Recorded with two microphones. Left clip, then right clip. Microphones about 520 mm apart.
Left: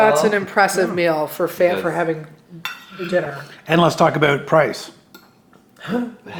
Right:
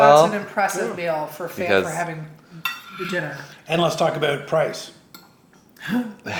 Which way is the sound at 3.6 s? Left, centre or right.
Left.